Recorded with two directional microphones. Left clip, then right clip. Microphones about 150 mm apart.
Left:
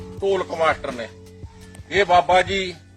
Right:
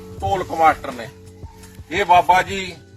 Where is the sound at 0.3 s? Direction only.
25° left (ahead or behind).